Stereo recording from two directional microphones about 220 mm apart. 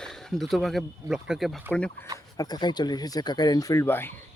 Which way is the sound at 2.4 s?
20° left (ahead or behind).